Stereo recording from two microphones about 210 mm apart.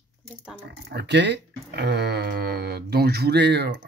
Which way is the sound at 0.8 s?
55° right (ahead or behind).